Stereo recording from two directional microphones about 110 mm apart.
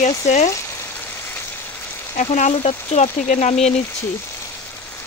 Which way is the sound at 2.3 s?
75° left (ahead or behind).